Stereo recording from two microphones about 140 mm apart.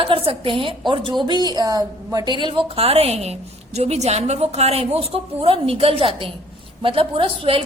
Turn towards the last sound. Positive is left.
turn(degrees=-40)  # may be behind; listen again after turning